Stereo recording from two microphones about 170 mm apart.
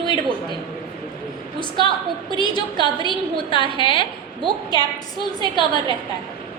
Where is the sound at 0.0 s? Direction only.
30° right (ahead or behind).